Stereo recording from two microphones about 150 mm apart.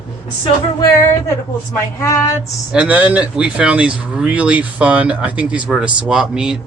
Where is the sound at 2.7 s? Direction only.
10° right (ahead or behind).